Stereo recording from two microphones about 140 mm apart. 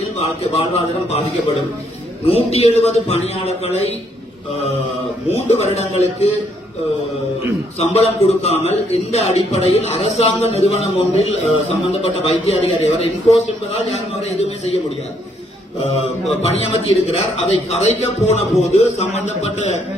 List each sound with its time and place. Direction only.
0.2 s a man's voice: 45° left (ahead or behind)
2.3 s a man's voice: 45° left (ahead or behind)
5.3 s a man's voice: 50° left (ahead or behind)
7.8 s a man's voice: 45° left (ahead or behind)
17.1 s a man's voice: 50° left (ahead or behind)